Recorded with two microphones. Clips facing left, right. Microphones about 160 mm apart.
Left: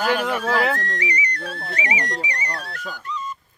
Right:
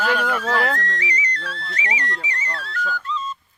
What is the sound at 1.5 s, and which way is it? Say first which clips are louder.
Speech: left 2 dB; 50° left (ahead or behind).